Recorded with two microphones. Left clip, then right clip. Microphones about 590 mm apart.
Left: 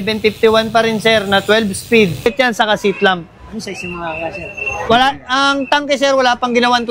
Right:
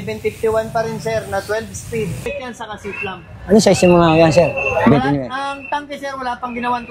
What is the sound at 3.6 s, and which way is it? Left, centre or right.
Speech, right.